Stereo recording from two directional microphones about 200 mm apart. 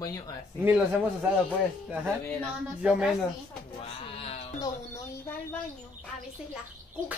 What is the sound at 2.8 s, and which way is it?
Speech, 5° right (ahead or behind).